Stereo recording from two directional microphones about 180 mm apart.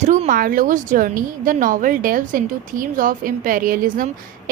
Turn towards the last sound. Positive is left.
turn(degrees=-50)  # may be behind; listen again after turning